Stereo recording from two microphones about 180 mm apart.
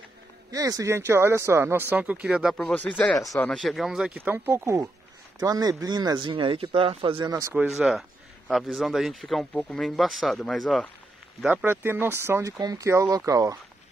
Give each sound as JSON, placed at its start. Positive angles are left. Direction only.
{"t": 0.5, "sound": "speech", "side_deg": -20}
{"t": 2.5, "sound": "speech", "side_deg": 5}
{"t": 7.5, "sound": "speech", "side_deg": -5}
{"t": 11.4, "sound": "speech", "side_deg": -10}